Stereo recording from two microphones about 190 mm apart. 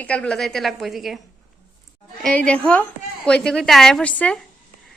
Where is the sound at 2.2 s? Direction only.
5° left (ahead or behind).